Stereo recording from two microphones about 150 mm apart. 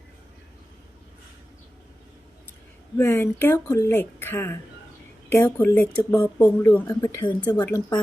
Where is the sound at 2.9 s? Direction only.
15° left (ahead or behind).